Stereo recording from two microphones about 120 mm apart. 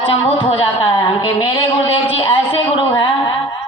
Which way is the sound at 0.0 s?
45° left (ahead or behind).